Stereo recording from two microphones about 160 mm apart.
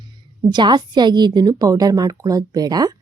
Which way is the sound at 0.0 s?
25° right (ahead or behind).